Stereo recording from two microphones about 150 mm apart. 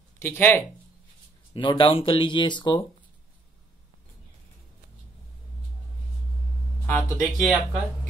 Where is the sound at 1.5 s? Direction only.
35° left (ahead or behind).